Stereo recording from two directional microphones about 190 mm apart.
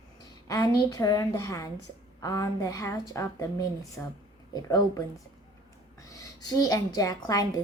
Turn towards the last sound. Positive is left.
turn(degrees=20)  # may be behind; listen again after turning